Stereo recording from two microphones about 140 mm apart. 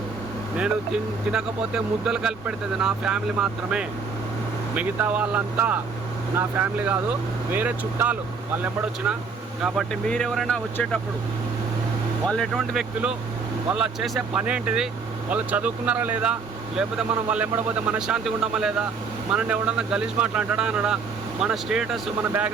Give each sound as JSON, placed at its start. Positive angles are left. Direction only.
{"t": 1.3, "sound": "speech", "side_deg": -5}
{"t": 12.2, "sound": "speech", "side_deg": 5}